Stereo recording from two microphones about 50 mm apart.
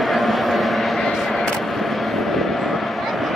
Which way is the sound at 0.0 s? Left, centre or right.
Centre.